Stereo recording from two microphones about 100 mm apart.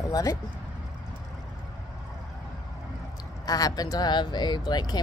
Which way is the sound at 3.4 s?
40° left (ahead or behind).